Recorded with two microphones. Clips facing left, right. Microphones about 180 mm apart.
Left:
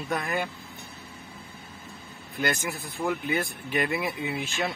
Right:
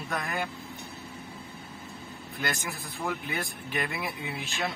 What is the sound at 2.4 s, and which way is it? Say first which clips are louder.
Speech: left 5 dB; centre (ahead or behind).